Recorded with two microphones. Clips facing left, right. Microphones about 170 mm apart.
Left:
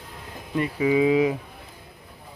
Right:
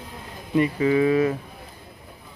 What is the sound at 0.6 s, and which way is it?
Speech, 5° left (ahead or behind).